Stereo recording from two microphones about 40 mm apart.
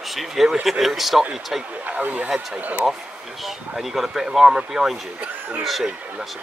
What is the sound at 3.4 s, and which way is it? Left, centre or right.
Speech, centre.